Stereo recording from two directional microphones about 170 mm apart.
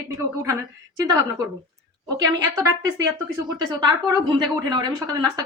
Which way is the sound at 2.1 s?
20° right (ahead or behind).